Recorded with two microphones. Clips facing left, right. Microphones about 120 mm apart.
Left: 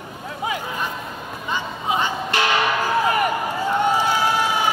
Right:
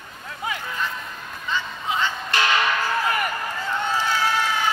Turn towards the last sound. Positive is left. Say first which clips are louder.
# left 3 dB
turn(degrees=15)  # may be behind; listen again after turning